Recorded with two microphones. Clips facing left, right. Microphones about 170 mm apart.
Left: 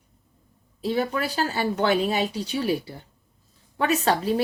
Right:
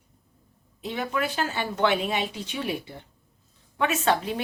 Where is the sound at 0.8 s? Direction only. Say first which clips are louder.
Left 4 dB; 35° left (ahead or behind).